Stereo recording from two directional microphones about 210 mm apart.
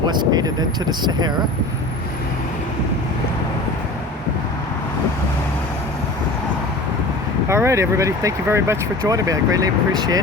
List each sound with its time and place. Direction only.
0.1 s speech: 20° right (ahead or behind)
7.4 s speech: 15° right (ahead or behind)